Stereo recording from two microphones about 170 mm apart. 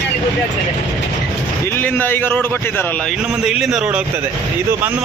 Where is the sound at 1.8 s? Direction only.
10° left (ahead or behind).